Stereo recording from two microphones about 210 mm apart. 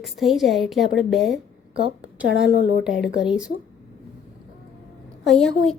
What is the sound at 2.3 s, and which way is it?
Speech, 60° left (ahead or behind).